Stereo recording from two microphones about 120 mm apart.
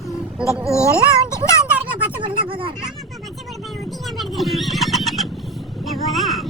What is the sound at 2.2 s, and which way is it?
Speech, 45° right (ahead or behind).